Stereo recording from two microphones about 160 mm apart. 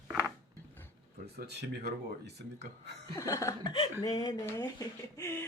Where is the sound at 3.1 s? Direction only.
20° left (ahead or behind).